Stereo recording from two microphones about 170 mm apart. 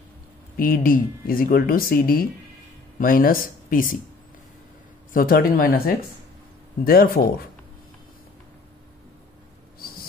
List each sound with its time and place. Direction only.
0.6 s speech: 60° left (ahead or behind)
5.1 s speech: 60° left (ahead or behind)